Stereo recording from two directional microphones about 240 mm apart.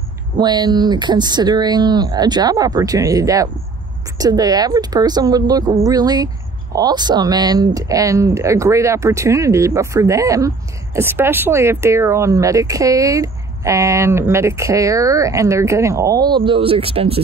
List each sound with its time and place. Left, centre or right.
0.4 s a woman's voice: centre